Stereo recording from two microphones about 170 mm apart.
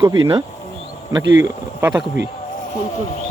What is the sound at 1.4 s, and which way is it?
Speech, 20° right (ahead or behind).